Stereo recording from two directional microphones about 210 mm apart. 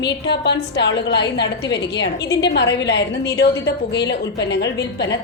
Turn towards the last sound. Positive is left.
turn(degrees=55)  # may be behind; listen again after turning